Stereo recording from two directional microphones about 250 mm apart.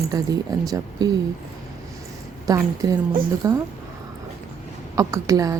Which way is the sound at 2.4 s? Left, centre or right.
Centre.